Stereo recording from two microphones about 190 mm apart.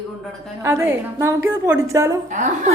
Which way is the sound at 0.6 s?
15° right (ahead or behind).